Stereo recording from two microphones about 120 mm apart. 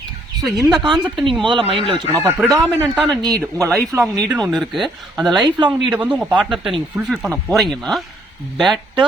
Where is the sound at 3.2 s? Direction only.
30° right (ahead or behind).